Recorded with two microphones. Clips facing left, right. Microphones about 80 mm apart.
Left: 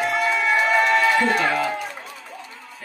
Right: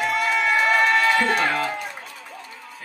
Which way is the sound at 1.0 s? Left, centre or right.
Left.